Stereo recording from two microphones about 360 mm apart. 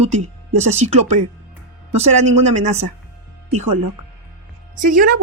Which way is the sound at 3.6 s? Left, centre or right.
Right.